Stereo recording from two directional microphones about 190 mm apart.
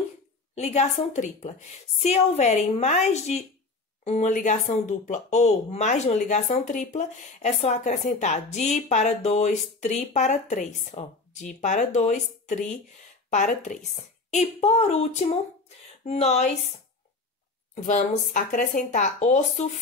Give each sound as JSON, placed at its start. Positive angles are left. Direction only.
{"t": 0.6, "sound": "speech", "side_deg": 35}
{"t": 17.8, "sound": "speech", "side_deg": 40}